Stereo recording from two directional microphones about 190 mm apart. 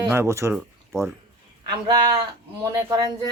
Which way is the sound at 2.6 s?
15° right (ahead or behind).